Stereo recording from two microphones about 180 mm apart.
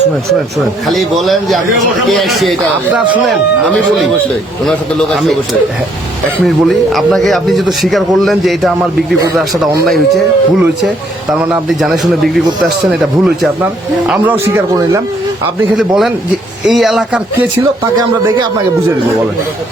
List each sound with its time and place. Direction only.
0.9 s speech: centre (ahead or behind)
6.4 s speech: centre (ahead or behind)
10.6 s speech: 5° right (ahead or behind)
14.1 s speech: 10° right (ahead or behind)
15.8 s speech: centre (ahead or behind)
17.6 s speech: 20° right (ahead or behind)